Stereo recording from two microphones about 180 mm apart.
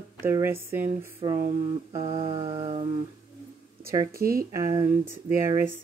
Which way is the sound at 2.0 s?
30° right (ahead or behind).